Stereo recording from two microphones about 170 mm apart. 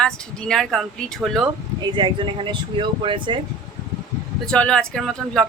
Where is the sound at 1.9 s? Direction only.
30° right (ahead or behind).